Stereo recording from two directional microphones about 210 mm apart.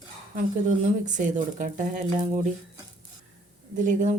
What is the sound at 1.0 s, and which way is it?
A woman's voice, 35° right (ahead or behind).